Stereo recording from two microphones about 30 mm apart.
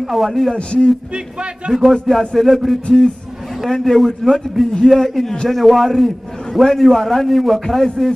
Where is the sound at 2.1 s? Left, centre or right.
Centre.